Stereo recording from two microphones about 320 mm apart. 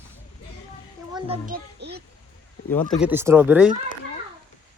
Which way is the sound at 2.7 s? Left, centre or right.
Centre.